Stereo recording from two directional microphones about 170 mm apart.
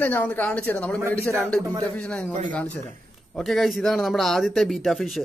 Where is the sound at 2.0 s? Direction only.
5° left (ahead or behind).